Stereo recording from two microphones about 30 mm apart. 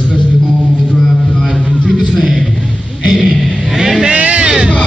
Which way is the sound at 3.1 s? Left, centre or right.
Centre.